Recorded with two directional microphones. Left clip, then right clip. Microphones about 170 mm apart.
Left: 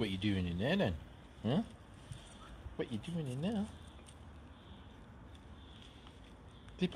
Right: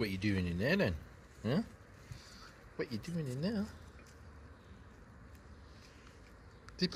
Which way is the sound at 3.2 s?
5° right (ahead or behind).